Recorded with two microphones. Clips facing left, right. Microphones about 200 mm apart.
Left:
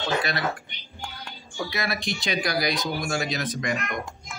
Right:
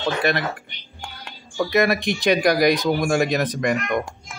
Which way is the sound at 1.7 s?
55° right (ahead or behind).